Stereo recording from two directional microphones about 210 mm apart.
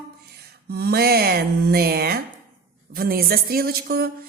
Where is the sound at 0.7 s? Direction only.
50° right (ahead or behind).